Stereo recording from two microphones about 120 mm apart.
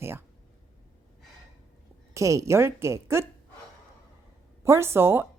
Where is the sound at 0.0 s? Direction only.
20° right (ahead or behind).